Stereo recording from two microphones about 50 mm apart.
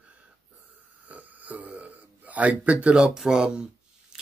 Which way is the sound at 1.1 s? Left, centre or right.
Right.